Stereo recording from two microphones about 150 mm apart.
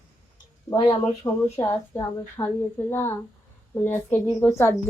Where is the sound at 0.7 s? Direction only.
30° left (ahead or behind).